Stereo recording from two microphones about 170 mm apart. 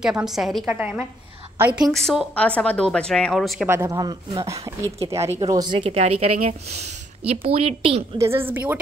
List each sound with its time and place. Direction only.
0.0 s a woman's voice: 5° right (ahead or behind)
1.9 s speech: 5° left (ahead or behind)
3.6 s a woman's voice: 15° right (ahead or behind); by 8.0 s 35° right (ahead or behind)
8.2 s a woman's voice: 15° right (ahead or behind)